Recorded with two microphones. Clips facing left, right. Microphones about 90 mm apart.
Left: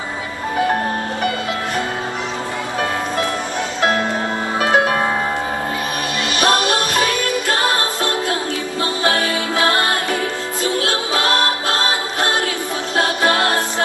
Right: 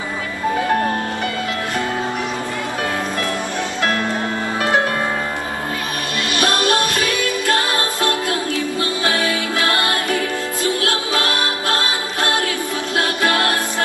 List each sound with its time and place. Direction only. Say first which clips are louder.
6.3 s music: left 1 dB; 20° left (ahead or behind)
9.6 s music: left 3 dB; 25° left (ahead or behind)
12.9 s music: left 2 dB; 25° left (ahead or behind)